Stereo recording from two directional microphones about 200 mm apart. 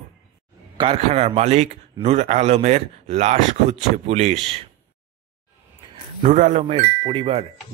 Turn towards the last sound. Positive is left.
turn(degrees=-30)  # may be behind; listen again after turning